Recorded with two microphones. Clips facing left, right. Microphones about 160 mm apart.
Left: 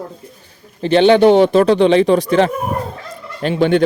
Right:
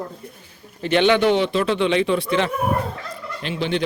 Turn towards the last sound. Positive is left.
turn(degrees=50)  # may be behind; listen again after turning